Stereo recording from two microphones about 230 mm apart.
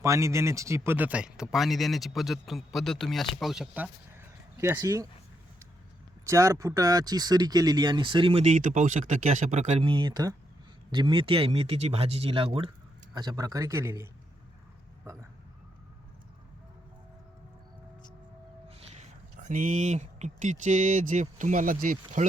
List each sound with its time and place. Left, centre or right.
0.0 s speech: centre
6.2 s speech: centre
18.7 s speech: right